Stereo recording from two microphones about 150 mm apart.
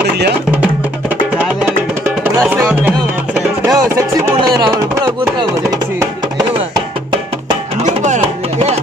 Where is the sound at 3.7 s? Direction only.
20° right (ahead or behind).